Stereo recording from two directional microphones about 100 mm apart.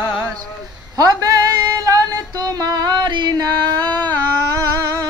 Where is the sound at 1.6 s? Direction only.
40° right (ahead or behind).